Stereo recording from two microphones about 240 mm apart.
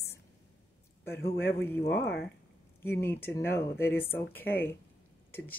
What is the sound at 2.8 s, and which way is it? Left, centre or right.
Speech, centre.